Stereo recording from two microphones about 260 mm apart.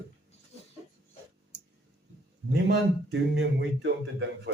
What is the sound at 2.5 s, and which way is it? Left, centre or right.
Speech, right.